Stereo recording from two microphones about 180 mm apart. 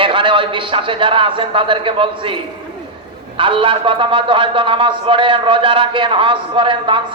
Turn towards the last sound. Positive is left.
turn(degrees=-30)  # may be behind; listen again after turning